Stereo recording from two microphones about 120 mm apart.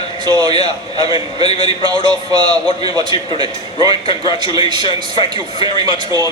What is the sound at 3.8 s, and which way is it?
Speech, 45° left (ahead or behind).